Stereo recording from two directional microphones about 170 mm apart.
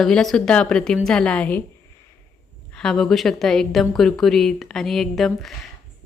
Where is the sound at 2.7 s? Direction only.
5° left (ahead or behind).